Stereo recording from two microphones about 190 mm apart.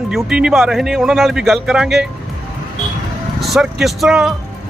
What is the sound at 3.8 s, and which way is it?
Speech, centre (ahead or behind).